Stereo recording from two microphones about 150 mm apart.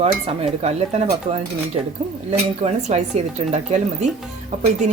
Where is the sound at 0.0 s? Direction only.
45° right (ahead or behind).